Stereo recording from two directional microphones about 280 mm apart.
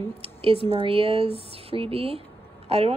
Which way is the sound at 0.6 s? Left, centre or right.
Centre.